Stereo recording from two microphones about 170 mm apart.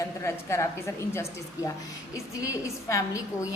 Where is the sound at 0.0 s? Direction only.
15° left (ahead or behind).